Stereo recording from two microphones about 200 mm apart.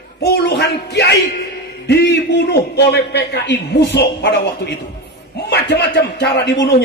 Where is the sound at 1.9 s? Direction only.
55° left (ahead or behind).